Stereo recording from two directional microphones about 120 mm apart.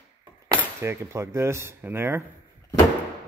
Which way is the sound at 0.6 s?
20° right (ahead or behind).